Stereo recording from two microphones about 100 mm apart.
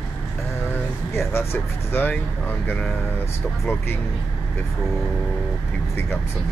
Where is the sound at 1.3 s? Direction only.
25° left (ahead or behind).